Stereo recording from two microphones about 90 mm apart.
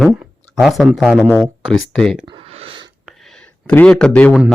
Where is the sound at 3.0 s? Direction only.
5° left (ahead or behind).